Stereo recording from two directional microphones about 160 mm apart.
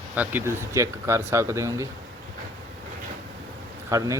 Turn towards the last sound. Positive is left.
turn(degrees=-20)  # may be behind; listen again after turning